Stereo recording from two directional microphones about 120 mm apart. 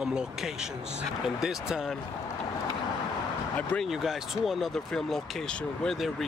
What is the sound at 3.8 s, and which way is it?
Speech, 5° right (ahead or behind).